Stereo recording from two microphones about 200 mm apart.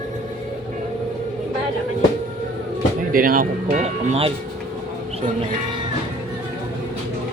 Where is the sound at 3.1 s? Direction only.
45° right (ahead or behind).